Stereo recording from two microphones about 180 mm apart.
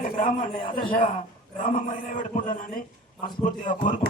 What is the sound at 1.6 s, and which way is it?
Speech, 50° left (ahead or behind).